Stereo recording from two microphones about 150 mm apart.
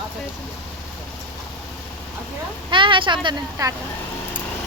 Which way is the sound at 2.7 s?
35° right (ahead or behind).